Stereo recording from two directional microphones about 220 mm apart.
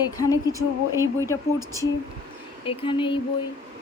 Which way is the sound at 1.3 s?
15° left (ahead or behind).